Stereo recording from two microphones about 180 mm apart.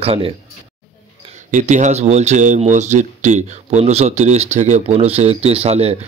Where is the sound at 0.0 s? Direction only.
30° right (ahead or behind).